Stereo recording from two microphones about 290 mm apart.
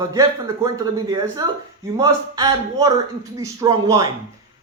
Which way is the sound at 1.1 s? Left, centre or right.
Centre.